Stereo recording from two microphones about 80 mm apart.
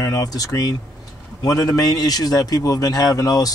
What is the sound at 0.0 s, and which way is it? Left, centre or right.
Speech, left.